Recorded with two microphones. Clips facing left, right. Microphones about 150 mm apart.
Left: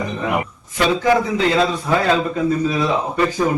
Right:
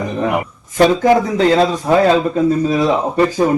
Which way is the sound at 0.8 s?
40° right (ahead or behind).